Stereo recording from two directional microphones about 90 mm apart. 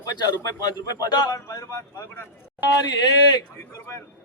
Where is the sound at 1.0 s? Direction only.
50° left (ahead or behind).